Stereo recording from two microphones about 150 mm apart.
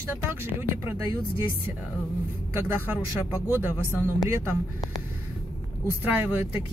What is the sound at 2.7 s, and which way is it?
Speech, 15° right (ahead or behind).